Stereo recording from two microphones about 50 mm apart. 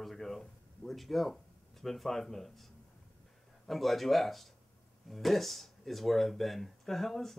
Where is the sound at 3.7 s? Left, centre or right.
Centre.